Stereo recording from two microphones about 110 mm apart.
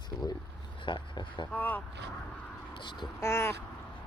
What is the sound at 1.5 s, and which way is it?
Crow, 15° left (ahead or behind).